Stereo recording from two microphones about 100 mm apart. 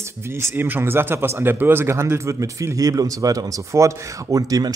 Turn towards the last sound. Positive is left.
turn(degrees=-35)  # may be behind; listen again after turning